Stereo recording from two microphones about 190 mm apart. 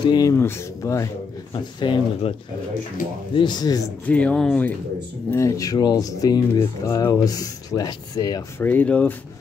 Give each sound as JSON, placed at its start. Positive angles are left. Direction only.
{"t": 0.0, "sound": "speech", "side_deg": 20}
{"t": 3.3, "sound": "speech", "side_deg": 20}
{"t": 4.1, "sound": "speech", "side_deg": 5}
{"t": 5.3, "sound": "speech", "side_deg": 15}
{"t": 8.6, "sound": "speech", "side_deg": 5}